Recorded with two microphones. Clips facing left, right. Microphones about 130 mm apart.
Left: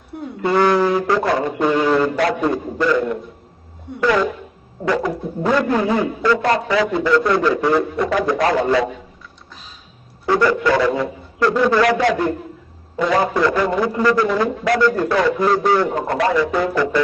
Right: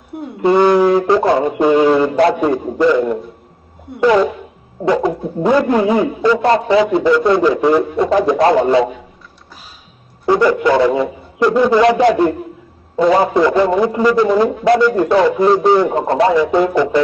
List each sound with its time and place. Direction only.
0.4 s a man's voice: 20° right (ahead or behind)
10.2 s a man's voice: 20° right (ahead or behind)
12.1 s a man's voice: 30° right (ahead or behind)